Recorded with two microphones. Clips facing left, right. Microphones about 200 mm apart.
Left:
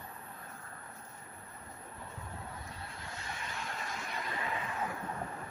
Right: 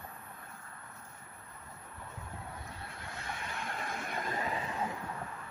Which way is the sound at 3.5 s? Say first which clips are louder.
Right 3 dB; 55° right (ahead or behind).